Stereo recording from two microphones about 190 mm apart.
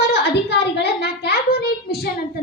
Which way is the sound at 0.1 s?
60° left (ahead or behind).